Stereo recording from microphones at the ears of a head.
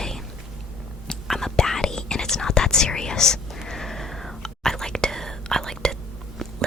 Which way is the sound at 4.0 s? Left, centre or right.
Centre.